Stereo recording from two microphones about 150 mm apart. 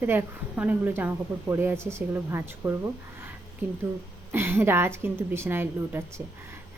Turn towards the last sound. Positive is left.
turn(degrees=-15)  # may be behind; listen again after turning